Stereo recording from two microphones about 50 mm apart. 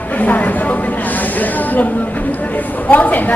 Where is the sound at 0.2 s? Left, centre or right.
Left.